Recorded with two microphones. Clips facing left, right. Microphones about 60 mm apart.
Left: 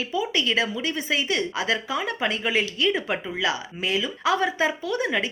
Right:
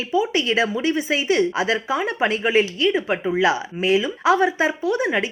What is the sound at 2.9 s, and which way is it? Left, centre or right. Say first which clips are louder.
Speech: right 6 dB; centre.